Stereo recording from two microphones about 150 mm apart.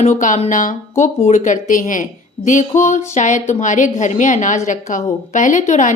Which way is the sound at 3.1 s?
55° left (ahead or behind).